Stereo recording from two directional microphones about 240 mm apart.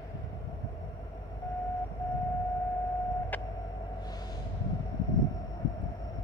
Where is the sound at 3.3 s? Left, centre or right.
Centre.